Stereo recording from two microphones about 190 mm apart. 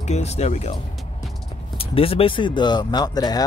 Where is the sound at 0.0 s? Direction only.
35° left (ahead or behind).